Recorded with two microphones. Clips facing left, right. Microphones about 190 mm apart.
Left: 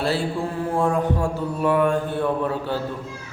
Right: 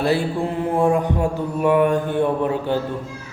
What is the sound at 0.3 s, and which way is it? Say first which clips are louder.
Mantra: right 3 dB; 20° right (ahead or behind).